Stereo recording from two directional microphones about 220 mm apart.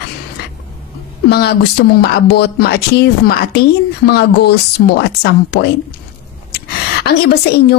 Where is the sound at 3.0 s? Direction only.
45° left (ahead or behind).